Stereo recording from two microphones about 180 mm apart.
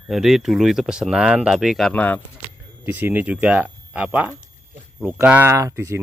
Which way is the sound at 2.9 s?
10° right (ahead or behind).